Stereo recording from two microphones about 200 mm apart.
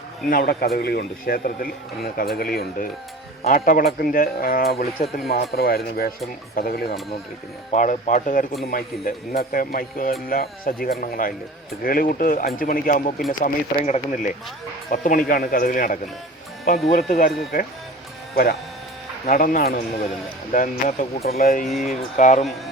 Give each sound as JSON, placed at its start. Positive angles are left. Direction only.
{"t": 0.3, "sound": "speech", "side_deg": 45}
{"t": 7.7, "sound": "speech", "side_deg": 40}
{"t": 19.2, "sound": "speech", "side_deg": 45}
{"t": 21.7, "sound": "speech", "side_deg": 0}
{"t": 22.2, "sound": "speech", "side_deg": 40}